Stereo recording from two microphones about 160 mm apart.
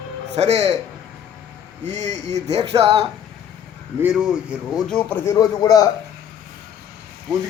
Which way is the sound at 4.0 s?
5° right (ahead or behind).